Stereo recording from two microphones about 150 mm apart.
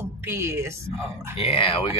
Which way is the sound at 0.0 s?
15° right (ahead or behind).